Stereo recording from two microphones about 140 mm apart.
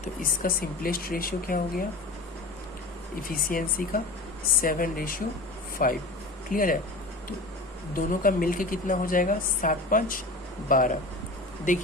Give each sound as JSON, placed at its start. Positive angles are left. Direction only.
{"t": 0.0, "sound": "speech", "side_deg": 85}
{"t": 3.2, "sound": "a woman's voice", "side_deg": 85}
{"t": 7.9, "sound": "a woman's voice", "side_deg": 80}